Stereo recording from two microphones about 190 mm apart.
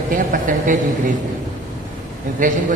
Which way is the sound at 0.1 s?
45° right (ahead or behind).